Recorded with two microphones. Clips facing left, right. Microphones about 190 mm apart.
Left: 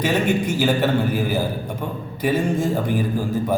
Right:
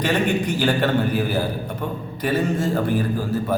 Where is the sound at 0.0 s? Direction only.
10° left (ahead or behind).